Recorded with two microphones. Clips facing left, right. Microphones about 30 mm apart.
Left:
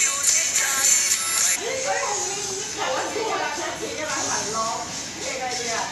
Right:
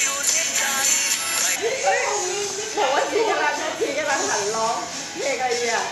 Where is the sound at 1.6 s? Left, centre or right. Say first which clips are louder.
Right 8 dB; centre.